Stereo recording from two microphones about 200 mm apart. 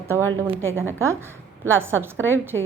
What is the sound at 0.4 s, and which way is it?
A woman's voice, 10° right (ahead or behind).